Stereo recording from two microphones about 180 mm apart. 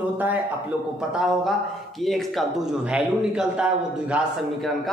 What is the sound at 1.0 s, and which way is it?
Speech, 5° right (ahead or behind).